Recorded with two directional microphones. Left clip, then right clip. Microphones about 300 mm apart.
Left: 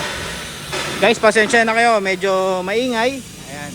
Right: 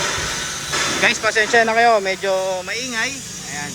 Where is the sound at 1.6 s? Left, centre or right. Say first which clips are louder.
Even; left.